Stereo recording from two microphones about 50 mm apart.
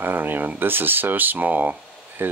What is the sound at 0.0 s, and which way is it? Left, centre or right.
Speech, right.